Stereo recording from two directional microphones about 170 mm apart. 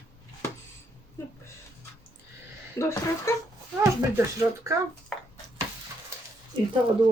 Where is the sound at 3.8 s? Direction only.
20° right (ahead or behind).